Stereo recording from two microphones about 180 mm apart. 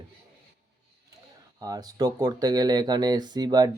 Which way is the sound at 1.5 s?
20° right (ahead or behind).